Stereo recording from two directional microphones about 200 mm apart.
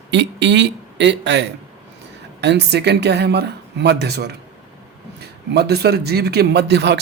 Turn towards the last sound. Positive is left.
turn(degrees=-55)  # may be behind; listen again after turning